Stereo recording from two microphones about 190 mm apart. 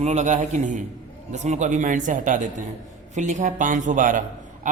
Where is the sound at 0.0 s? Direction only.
35° right (ahead or behind).